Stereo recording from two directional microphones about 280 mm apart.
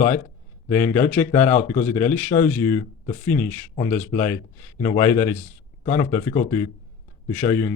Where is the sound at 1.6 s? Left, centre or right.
Left.